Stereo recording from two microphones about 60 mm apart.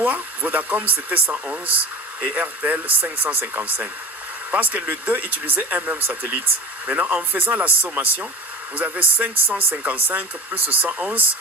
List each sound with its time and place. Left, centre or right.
0.0 s speech: right